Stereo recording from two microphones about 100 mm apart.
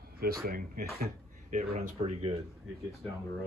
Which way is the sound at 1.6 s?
90° right.